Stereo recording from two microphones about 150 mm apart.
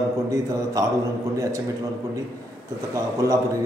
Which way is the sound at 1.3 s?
20° right (ahead or behind).